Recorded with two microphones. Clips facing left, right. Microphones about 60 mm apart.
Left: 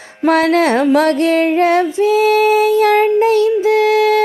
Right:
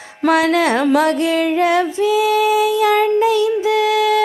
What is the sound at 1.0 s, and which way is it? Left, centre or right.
Female singing, left.